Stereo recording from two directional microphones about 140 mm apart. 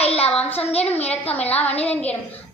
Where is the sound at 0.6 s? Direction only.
45° left (ahead or behind).